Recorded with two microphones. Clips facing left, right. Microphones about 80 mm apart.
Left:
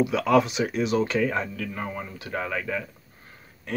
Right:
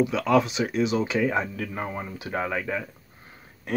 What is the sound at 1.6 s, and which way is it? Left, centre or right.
Speech, centre.